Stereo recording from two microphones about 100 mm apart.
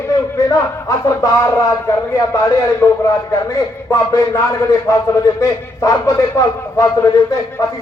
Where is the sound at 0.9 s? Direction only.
30° left (ahead or behind).